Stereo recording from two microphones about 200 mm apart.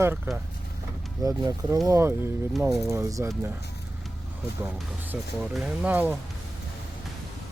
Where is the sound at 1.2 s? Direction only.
15° right (ahead or behind).